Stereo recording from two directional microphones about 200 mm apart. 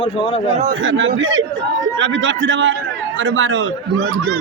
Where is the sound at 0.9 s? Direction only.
70° right (ahead or behind).